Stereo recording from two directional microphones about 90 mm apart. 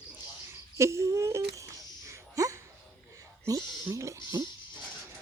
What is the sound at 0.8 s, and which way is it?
Wail, 30° right (ahead or behind).